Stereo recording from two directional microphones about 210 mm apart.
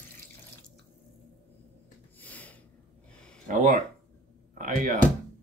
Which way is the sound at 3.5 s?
35° right (ahead or behind).